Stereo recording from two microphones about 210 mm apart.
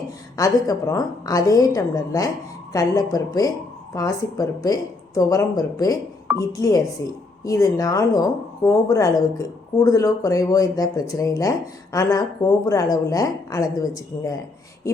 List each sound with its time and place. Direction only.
0.3 s speech: 15° left (ahead or behind)